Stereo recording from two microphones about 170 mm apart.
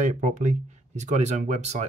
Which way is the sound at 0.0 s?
50° right (ahead or behind).